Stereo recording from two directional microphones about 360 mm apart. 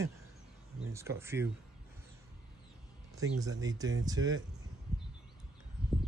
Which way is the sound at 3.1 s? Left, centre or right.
Centre.